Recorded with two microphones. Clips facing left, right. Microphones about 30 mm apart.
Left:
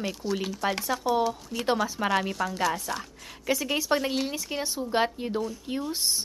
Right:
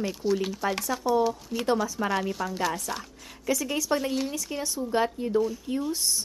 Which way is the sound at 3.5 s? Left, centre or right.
Left.